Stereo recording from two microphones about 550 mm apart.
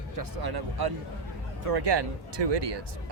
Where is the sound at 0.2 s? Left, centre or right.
Right.